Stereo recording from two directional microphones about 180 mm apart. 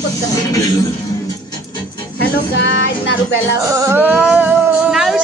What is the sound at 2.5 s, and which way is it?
Female singing, 80° left.